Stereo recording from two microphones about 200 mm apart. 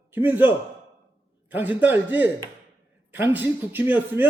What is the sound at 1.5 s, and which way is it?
A man's voice, 10° right (ahead or behind).